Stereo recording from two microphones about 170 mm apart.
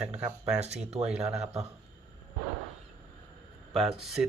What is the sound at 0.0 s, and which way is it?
Speech, 5° right (ahead or behind).